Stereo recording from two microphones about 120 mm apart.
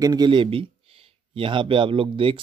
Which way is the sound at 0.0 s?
35° right (ahead or behind).